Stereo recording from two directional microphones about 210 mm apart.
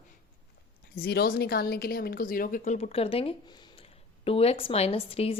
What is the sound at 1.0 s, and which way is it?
A woman's voice, 50° left (ahead or behind).